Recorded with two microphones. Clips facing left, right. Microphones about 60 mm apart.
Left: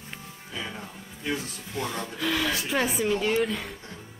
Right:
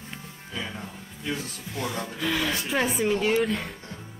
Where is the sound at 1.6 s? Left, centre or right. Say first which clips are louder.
Even; centre.